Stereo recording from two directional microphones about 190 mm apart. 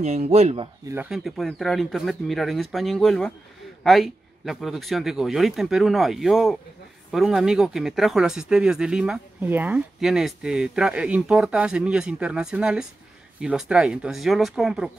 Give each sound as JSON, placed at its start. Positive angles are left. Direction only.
{"t": 0.0, "sound": "speech", "side_deg": -35}
{"t": 0.8, "sound": "speech", "side_deg": -10}